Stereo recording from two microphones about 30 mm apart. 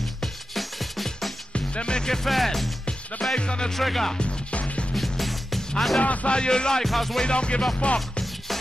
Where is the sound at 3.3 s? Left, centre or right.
Left.